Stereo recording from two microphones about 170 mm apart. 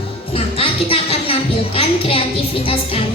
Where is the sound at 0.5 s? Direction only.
35° left (ahead or behind).